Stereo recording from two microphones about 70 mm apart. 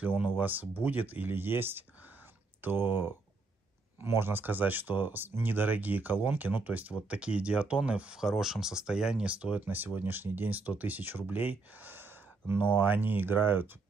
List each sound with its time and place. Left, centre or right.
0.0 s speech: right